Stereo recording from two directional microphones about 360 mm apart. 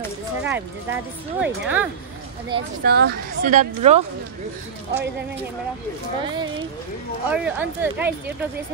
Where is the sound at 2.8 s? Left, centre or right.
Right.